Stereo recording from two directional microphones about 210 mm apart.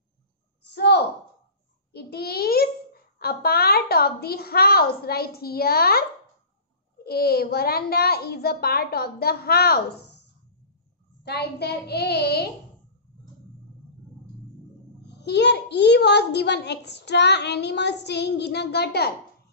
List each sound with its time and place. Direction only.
0.7 s a sound: 55° left (ahead or behind)
7.0 s a child's voice: 50° left (ahead or behind)
11.2 s a child's voice: 50° left (ahead or behind)
15.0 s a child's voice: 55° left (ahead or behind)